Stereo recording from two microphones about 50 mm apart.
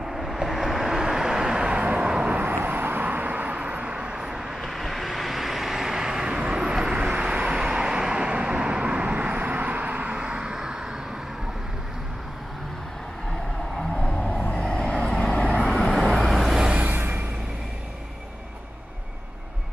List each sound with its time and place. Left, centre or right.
0.1 s vehicle: centre; by 2.1 s right
2.3 s vehicle: right; by 4.6 s centre
4.6 s vehicle: centre
14.0 s vehicle: left
14.6 s vehicle: centre
15.5 s vehicle: centre
16.5 s vehicle: centre
16.8 s vehicle: right